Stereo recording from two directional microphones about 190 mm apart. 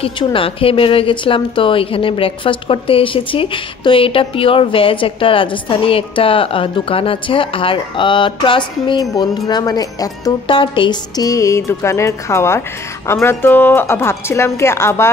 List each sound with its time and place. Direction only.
0.0 s a woman's voice: 30° left (ahead or behind)